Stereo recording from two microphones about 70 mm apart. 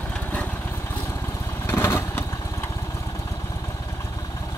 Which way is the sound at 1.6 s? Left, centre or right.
Left.